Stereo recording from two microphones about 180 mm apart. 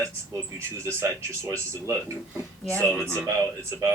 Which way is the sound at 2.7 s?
10° left (ahead or behind).